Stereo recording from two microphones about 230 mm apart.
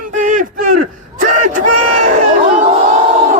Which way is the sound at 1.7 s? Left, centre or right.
Right.